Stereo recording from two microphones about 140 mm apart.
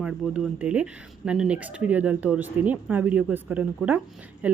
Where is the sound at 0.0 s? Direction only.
5° right (ahead or behind).